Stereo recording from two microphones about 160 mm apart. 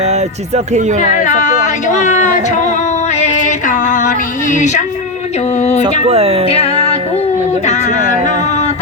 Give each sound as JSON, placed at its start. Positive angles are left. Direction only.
{"t": 0.0, "sound": "speech", "side_deg": -45}
{"t": 1.1, "sound": "a sound", "side_deg": 50}
{"t": 5.5, "sound": "music", "side_deg": 45}
{"t": 6.1, "sound": "speech", "side_deg": -40}
{"t": 6.5, "sound": "music", "side_deg": 35}
{"t": 7.6, "sound": "speech", "side_deg": 45}